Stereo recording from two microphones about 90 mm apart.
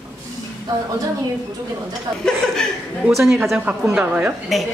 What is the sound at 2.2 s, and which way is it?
A woman's voice, 5° left (ahead or behind).